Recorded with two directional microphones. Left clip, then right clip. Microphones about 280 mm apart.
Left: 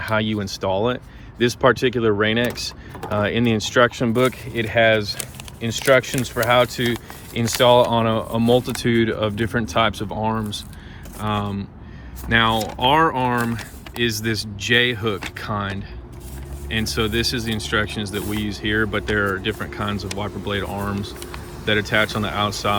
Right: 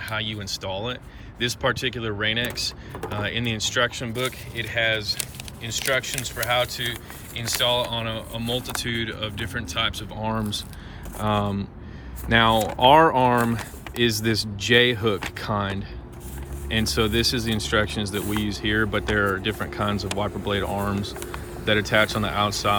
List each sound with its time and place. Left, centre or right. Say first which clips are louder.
0.0 s speech: left 7 dB; centre